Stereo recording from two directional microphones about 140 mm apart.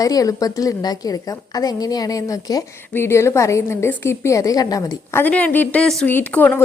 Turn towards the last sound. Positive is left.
turn(degrees=10)  # may be behind; listen again after turning